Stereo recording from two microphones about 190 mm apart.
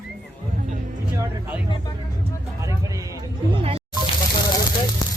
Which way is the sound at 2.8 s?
15° right (ahead or behind).